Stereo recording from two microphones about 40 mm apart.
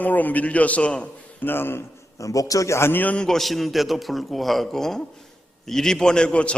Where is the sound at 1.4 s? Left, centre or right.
Left.